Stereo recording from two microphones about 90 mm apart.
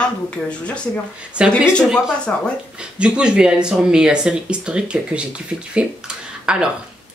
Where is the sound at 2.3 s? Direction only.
20° left (ahead or behind).